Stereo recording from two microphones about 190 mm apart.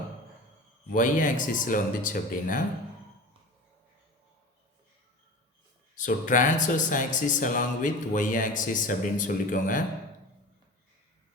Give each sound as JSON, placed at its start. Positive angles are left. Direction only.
{"t": 0.9, "sound": "speech", "side_deg": 45}
{"t": 6.0, "sound": "speech", "side_deg": 45}